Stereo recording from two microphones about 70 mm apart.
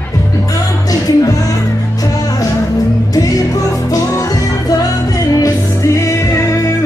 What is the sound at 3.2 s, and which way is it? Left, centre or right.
Music, left.